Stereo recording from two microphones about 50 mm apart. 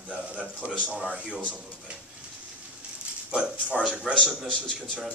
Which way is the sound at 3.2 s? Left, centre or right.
Right.